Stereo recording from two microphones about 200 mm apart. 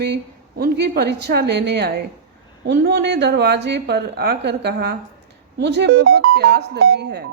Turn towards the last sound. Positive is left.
turn(degrees=-55)  # may be behind; listen again after turning